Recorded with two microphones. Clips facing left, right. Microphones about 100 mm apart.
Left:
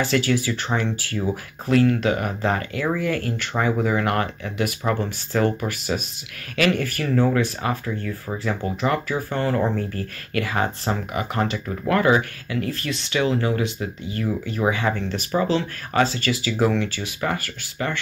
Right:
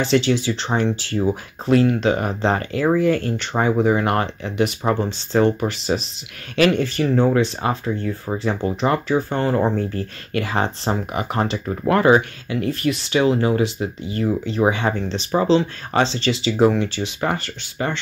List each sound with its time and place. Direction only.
0.0 s speech: 20° right (ahead or behind)